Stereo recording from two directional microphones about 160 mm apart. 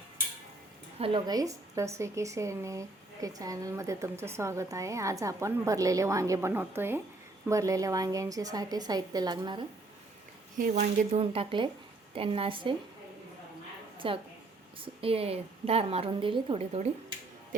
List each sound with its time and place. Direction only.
0.9 s a woman's voice: 35° right (ahead or behind)
1.3 s speech: 20° right (ahead or behind)
10.6 s a woman's voice: 45° right (ahead or behind)
14.0 s a woman's voice: 35° right (ahead or behind)
17.5 s speech: 55° right (ahead or behind)